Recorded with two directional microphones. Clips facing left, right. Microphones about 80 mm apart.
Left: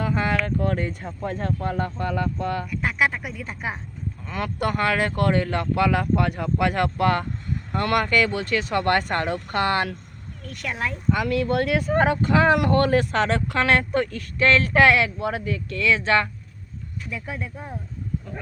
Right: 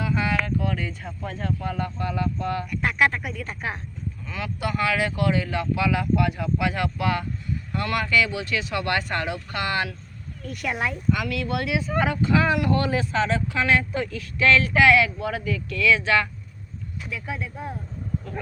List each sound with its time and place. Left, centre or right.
0.0 s a sound: left
0.4 s speech: left
2.8 s speech: centre
4.3 s speech: left
10.4 s speech: centre
11.1 s speech: left